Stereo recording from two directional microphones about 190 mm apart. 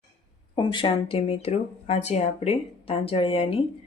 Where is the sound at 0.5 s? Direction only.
25° left (ahead or behind).